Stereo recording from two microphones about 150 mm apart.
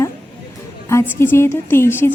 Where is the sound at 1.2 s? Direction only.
15° left (ahead or behind).